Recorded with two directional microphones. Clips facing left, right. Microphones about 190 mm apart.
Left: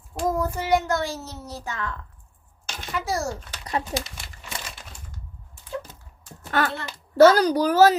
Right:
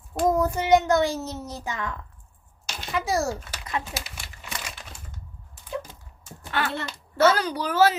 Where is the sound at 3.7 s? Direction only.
35° left (ahead or behind).